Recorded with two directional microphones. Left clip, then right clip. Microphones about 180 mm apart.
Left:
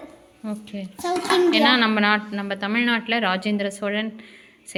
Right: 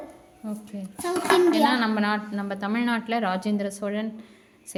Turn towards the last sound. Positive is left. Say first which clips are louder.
# left 4 dB
turn(degrees=0)  # may be behind; listen again after turning